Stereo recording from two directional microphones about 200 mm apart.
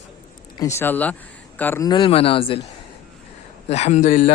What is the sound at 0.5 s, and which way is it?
Speech, 15° left (ahead or behind).